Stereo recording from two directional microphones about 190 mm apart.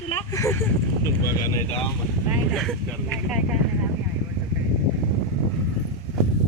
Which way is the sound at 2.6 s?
Centre (ahead or behind).